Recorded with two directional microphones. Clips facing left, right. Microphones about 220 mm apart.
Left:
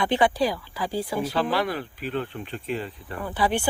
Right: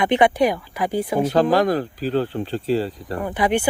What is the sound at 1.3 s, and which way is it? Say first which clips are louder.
Speech: right 10 dB; 45° right (ahead or behind).